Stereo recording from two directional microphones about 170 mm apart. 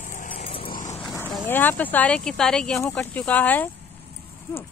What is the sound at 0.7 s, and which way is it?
Vehicle, 50° left (ahead or behind).